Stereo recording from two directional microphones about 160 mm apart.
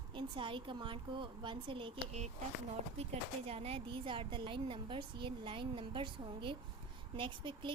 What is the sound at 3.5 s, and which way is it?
A woman's voice, 40° right (ahead or behind).